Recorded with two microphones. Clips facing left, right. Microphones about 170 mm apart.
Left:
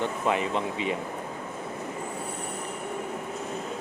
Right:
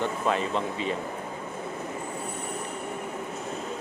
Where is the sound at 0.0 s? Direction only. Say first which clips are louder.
Even; 15° left (ahead or behind).